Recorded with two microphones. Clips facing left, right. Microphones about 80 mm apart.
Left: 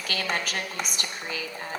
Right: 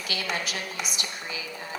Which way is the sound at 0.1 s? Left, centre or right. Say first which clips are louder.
Left 2 dB; left.